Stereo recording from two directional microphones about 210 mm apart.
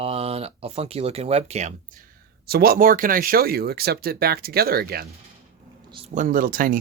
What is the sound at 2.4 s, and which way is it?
Speech, 45° right (ahead or behind).